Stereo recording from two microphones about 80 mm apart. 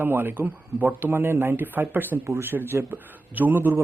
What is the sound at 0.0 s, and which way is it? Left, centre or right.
Speech, right.